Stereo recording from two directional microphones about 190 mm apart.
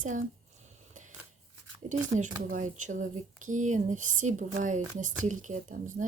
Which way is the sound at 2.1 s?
40° right (ahead or behind).